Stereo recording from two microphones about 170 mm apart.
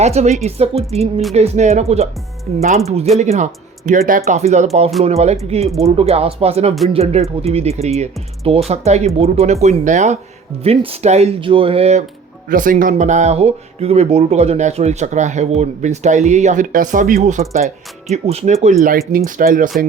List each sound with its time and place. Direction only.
0.0 s speech: 40° right (ahead or behind)
12.5 s speech: 55° right (ahead or behind)
18.8 s speech: 60° right (ahead or behind)